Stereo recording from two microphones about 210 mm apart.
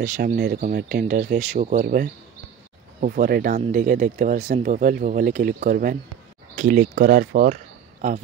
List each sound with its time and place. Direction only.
0.0 s speech: 40° right (ahead or behind)